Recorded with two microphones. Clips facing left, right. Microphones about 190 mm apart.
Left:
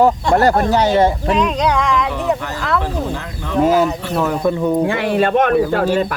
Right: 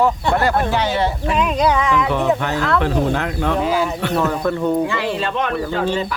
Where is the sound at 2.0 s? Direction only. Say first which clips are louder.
Right 2 dB; 60° right (ahead or behind).